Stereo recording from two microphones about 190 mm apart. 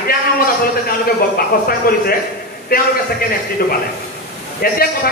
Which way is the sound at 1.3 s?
50° left (ahead or behind).